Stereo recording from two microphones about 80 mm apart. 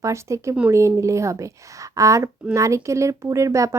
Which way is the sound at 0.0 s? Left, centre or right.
Right.